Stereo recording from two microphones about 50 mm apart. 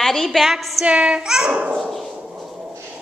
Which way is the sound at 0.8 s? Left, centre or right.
Right.